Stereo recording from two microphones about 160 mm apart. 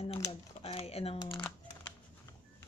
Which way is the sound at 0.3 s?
35° left (ahead or behind).